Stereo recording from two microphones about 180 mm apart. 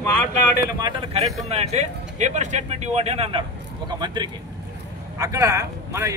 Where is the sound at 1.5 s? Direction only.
35° right (ahead or behind).